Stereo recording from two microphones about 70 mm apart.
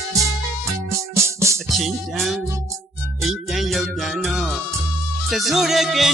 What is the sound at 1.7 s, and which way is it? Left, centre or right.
Music, centre.